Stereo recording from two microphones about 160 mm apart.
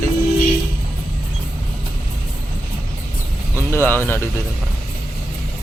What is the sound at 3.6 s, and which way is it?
Speech, 15° left (ahead or behind).